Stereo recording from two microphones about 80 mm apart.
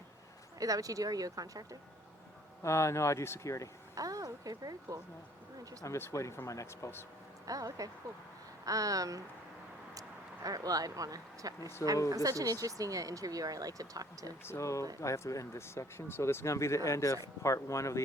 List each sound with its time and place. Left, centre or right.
0.6 s speech: right
2.6 s speech: left
3.9 s speech: right
5.8 s speech: left
7.4 s speech: right
14.4 s speech: left